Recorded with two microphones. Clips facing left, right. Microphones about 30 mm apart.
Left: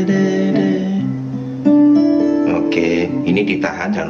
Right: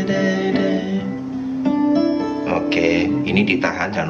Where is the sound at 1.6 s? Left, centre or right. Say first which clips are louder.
Left 7 dB; right.